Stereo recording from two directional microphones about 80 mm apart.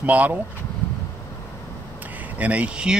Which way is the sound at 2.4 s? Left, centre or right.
Centre.